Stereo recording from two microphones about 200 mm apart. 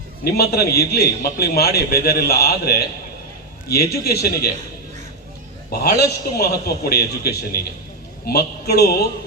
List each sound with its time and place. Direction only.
0.3 s a man's voice: 50° left (ahead or behind)
5.7 s a man's voice: 50° left (ahead or behind)